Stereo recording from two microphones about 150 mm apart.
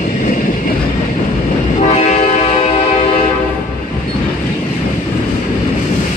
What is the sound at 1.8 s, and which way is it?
Train, 50° left (ahead or behind).